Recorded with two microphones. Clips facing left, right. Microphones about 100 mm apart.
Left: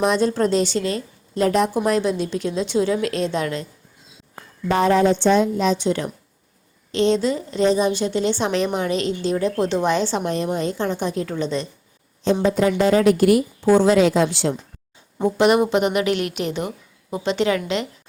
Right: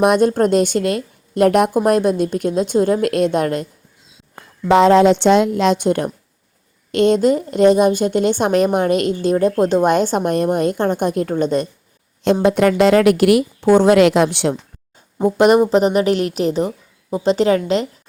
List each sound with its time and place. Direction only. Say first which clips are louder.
0.0 s a woman's voice: right 5 dB; 55° right (ahead or behind)
4.7 s a woman's voice: right 6 dB; 90° right
5.8 s a woman's voice: right 4 dB; 50° right (ahead or behind)
12.2 s a woman's voice: right 4 dB; 65° right (ahead or behind)
15.2 s a woman's voice: right 4 dB; 40° right (ahead or behind)